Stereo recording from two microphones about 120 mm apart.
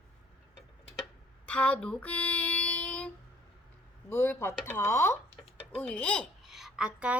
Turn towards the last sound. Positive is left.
turn(degrees=-10)  # may be behind; listen again after turning